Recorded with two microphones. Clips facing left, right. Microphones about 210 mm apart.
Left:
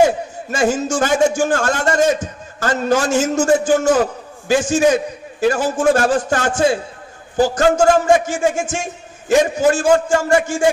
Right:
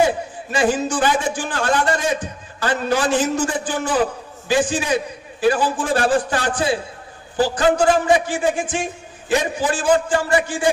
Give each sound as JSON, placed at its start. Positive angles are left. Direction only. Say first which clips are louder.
{"t": 0.5, "sound": "a man's voice", "louder": "left 1 dB", "side_deg": 45}